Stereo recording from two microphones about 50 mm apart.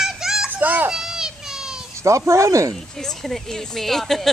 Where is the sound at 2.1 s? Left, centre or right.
Right.